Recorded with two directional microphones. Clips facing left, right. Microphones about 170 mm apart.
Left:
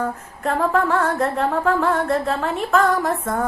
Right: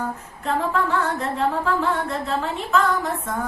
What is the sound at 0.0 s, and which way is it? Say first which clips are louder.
Female singing: left 4 dB; 50° left (ahead or behind).